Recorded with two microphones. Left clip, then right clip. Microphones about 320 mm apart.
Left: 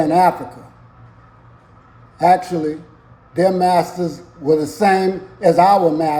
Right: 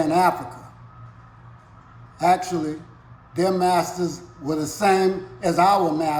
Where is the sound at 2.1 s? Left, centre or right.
Centre.